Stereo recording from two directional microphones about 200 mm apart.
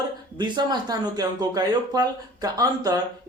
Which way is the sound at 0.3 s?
20° right (ahead or behind).